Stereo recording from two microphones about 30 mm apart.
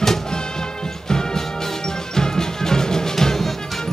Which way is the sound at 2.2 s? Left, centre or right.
Centre.